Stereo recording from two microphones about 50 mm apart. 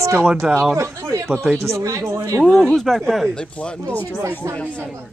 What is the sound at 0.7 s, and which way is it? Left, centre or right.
Speech, right.